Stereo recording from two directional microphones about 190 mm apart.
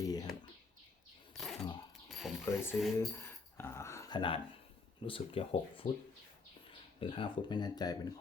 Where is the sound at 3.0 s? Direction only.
10° left (ahead or behind).